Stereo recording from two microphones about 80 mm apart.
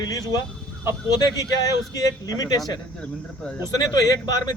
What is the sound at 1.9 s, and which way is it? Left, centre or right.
Speech, left.